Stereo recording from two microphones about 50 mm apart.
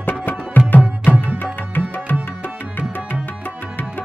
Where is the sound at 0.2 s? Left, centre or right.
Left.